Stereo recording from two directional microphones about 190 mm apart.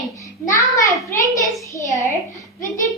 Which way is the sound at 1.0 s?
15° left (ahead or behind).